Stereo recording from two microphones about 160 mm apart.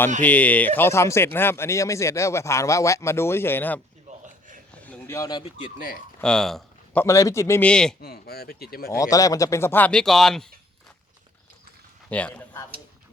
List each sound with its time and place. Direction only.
0.2 s speech: 10° left (ahead or behind)
4.1 s a sound: 45° right (ahead or behind)
4.8 s a sound: 10° left (ahead or behind)
6.1 s speech: 5° left (ahead or behind)
7.0 s speech: 20° left (ahead or behind)
7.7 s a man's voice: 5° left (ahead or behind)
8.0 s speech: 75° left (ahead or behind)
8.9 s speech: 20° left (ahead or behind); by 10.5 s centre (ahead or behind)
12.0 s speech: 10° left (ahead or behind)